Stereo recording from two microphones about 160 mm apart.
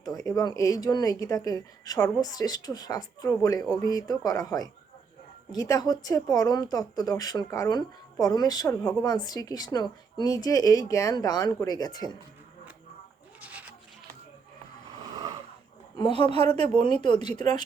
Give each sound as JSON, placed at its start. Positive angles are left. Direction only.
{"t": 0.0, "sound": "speech", "side_deg": 20}
{"t": 13.4, "sound": "sheep", "side_deg": -10}
{"t": 15.1, "sound": "a sound", "side_deg": -25}
{"t": 16.0, "sound": "speech", "side_deg": 30}
{"t": 16.2, "sound": "speech", "side_deg": -40}
{"t": 16.7, "sound": "speech", "side_deg": 30}